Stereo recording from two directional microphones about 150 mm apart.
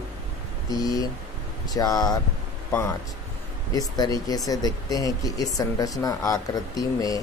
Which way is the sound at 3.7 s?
25° left (ahead or behind).